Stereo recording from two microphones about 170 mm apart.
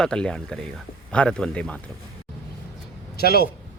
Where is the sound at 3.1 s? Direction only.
65° left (ahead or behind).